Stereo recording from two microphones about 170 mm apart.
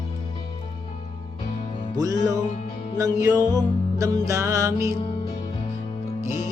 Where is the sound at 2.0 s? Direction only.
20° right (ahead or behind).